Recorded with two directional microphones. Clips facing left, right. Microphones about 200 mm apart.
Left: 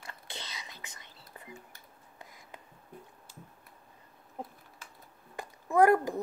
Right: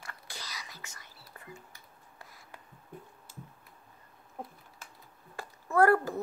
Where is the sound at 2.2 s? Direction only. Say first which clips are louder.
Left 2 dB; 20° left (ahead or behind).